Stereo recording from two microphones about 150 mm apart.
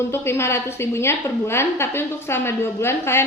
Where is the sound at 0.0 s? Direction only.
15° left (ahead or behind).